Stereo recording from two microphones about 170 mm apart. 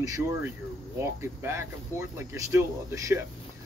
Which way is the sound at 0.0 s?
20° right (ahead or behind).